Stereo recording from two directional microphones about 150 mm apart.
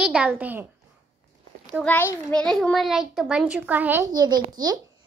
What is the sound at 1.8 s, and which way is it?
A child's voice, 15° left (ahead or behind).